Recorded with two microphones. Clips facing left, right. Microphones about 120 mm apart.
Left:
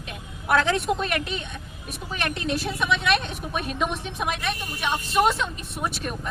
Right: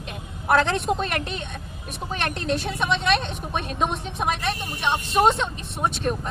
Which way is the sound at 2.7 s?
35° right (ahead or behind).